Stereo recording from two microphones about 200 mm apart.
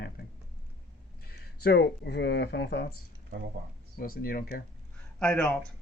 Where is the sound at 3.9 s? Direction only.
45° left (ahead or behind).